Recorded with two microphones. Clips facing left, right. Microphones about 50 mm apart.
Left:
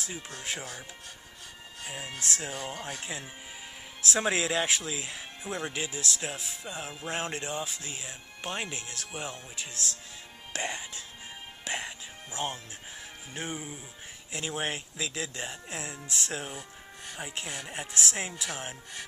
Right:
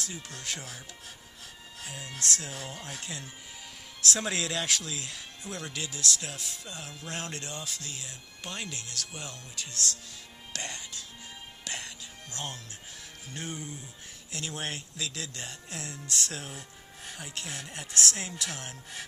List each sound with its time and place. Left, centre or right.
0.0 s speech: centre
1.9 s speech: centre
11.6 s music: centre
13.3 s speech: centre
16.5 s music: centre
17.2 s speech: centre
17.5 s speech: centre